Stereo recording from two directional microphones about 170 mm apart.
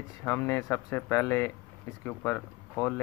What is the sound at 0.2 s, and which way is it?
Speech, 15° left (ahead or behind).